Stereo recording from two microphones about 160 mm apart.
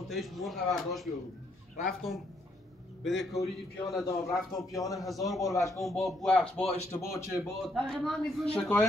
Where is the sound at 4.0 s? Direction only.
20° left (ahead or behind).